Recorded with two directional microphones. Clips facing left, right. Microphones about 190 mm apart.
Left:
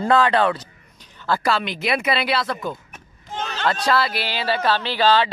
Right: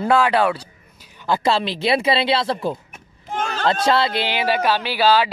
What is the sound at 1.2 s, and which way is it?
Speech, 20° right (ahead or behind).